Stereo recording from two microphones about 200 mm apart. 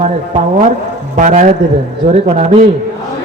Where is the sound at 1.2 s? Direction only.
40° right (ahead or behind).